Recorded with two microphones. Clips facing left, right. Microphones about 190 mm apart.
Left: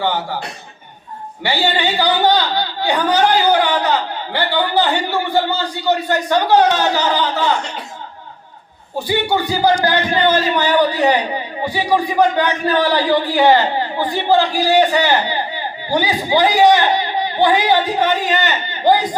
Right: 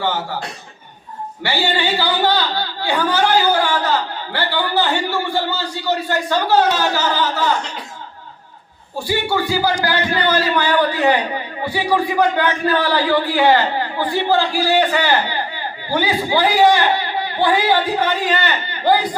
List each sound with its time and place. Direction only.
1.5 s a man's voice: 15° left (ahead or behind)
9.0 s a man's voice: 20° left (ahead or behind)